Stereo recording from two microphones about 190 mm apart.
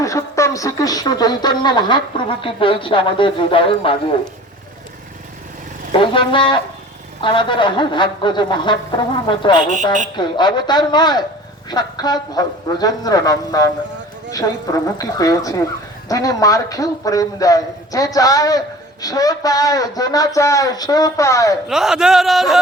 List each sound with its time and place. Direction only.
0.0 s speech: 15° left (ahead or behind)
5.9 s a man's voice: 25° left (ahead or behind)
21.7 s speech: 5° right (ahead or behind)